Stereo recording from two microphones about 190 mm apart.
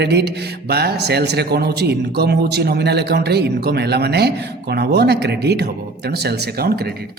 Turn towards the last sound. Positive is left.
turn(degrees=-55)  # may be behind; listen again after turning